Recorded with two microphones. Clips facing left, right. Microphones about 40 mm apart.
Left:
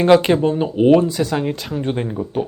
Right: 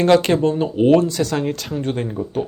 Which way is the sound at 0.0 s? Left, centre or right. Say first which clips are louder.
Left 2 dB; centre.